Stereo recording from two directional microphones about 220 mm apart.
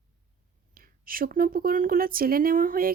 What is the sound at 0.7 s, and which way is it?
Speech, 40° right (ahead or behind).